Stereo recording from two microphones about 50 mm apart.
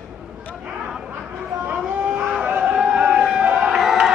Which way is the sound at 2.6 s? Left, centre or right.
Centre.